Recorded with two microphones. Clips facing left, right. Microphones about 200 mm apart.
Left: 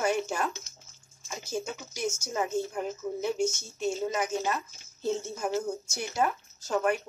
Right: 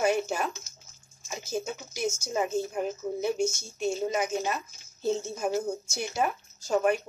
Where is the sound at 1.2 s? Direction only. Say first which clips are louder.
Right 2 dB; 10° right (ahead or behind).